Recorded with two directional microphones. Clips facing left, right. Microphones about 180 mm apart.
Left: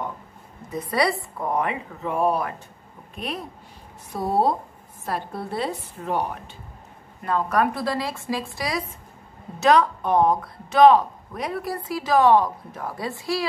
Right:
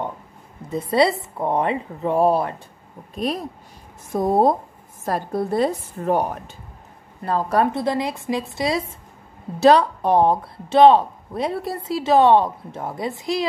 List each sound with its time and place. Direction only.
0.7 s a woman's voice: 25° right (ahead or behind)